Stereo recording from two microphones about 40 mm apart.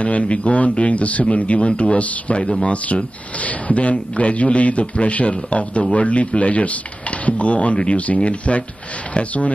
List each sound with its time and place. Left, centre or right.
0.0 s speech: left